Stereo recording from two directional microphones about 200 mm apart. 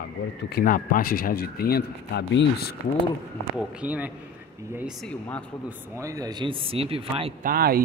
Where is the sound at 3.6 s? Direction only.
5° right (ahead or behind).